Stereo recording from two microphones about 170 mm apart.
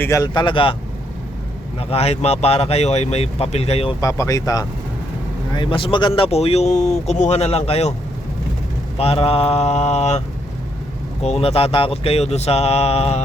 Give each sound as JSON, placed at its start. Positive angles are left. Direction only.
{"t": 0.0, "sound": "speech", "side_deg": 20}
{"t": 1.9, "sound": "speech", "side_deg": 35}
{"t": 4.0, "sound": "speech", "side_deg": 20}
{"t": 9.0, "sound": "speech", "side_deg": 35}